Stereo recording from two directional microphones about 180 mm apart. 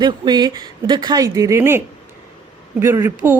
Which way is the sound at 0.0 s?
25° right (ahead or behind).